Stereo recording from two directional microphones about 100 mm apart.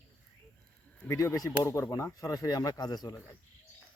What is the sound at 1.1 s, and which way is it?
Speech, 30° left (ahead or behind).